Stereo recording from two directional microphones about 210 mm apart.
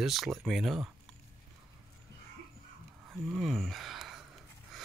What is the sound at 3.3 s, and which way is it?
Speech, centre (ahead or behind).